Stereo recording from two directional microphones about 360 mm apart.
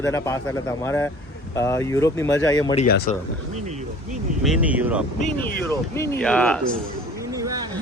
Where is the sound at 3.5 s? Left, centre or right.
Centre.